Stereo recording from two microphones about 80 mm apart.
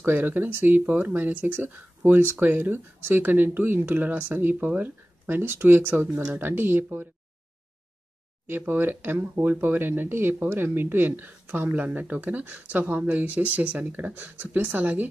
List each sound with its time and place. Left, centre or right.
0.0 s speech: right
8.5 s speech: right